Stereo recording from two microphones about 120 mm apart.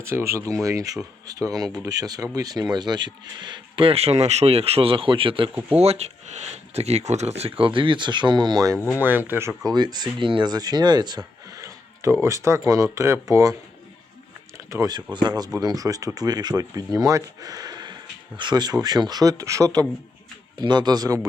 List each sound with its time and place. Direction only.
0.0 s speech: 20° right (ahead or behind); by 5.5 s 45° right (ahead or behind)
5.7 s speech: 60° right (ahead or behind); by 8.8 s 30° right (ahead or behind)
9.0 s speech: 15° right (ahead or behind)
9.6 s speech: 35° right (ahead or behind)
14.7 s speech: 30° right (ahead or behind)